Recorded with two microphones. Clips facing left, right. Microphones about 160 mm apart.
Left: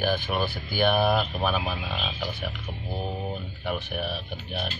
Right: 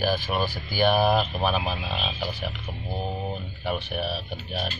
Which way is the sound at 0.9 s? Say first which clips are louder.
Right 2 dB; 25° right (ahead or behind).